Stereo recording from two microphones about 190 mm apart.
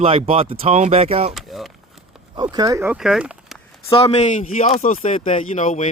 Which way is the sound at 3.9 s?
30° left (ahead or behind).